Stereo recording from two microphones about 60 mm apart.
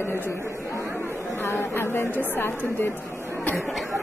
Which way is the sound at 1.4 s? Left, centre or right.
Left.